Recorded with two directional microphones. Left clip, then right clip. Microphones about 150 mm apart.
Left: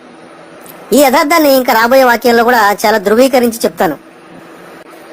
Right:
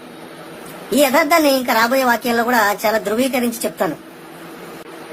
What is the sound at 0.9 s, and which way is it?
A woman's voice, 40° left (ahead or behind).